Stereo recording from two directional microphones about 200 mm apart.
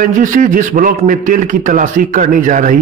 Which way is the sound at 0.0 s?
40° right (ahead or behind).